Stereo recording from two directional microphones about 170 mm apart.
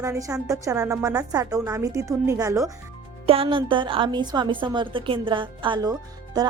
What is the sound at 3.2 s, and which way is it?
A woman's voice, 35° right (ahead or behind).